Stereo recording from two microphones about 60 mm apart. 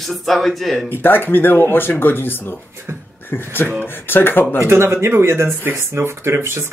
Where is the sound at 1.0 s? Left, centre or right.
Left.